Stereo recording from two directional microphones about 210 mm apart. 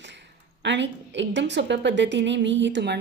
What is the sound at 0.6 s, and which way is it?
A woman's voice, 55° right (ahead or behind).